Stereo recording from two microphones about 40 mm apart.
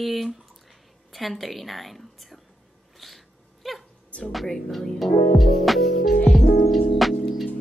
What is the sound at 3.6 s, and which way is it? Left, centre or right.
Music, centre.